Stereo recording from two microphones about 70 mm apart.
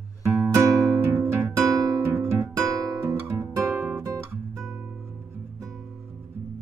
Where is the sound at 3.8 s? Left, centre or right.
Right.